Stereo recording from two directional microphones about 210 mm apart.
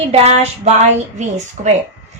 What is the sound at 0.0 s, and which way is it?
A woman's voice, 30° right (ahead or behind).